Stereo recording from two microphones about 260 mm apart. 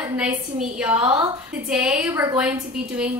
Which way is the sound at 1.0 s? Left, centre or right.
Centre.